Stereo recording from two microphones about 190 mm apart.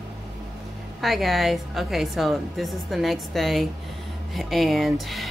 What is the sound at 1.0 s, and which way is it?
Speech, centre (ahead or behind).